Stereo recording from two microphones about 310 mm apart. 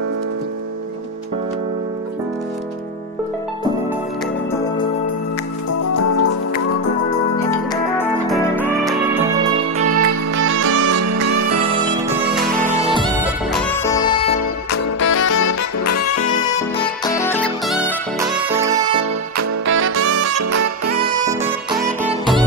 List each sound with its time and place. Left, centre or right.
5.9 s music: left
7.7 s music: centre
9.8 s music: right
10.5 s music: right
11.6 s music: centre
13.2 s music: centre
14.7 s music: left
15.4 s saxophone: left
17.2 s music: centre
17.7 s music: centre
19.3 s music: right
19.8 s music: right
21.0 s saxophone: centre
22.0 s music: centre